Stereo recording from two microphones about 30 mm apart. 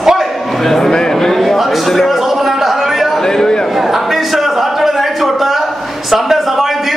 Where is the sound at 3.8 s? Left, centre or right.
Centre.